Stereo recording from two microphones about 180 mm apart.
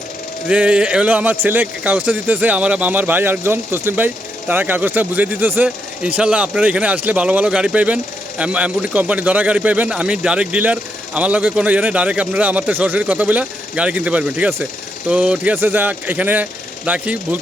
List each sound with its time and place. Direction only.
0.4 s a man's voice: 5° right (ahead or behind)